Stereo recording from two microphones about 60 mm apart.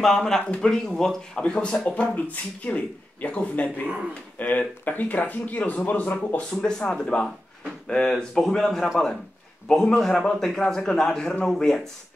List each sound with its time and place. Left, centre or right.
0.0 s a man's voice: centre; by 6.1 s left
6.5 s a man's voice: centre